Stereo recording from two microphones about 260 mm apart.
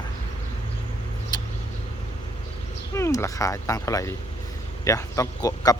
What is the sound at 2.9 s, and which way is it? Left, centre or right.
Speech, centre.